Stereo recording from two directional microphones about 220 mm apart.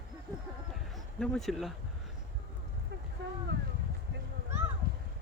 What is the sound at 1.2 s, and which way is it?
Speech, centre (ahead or behind).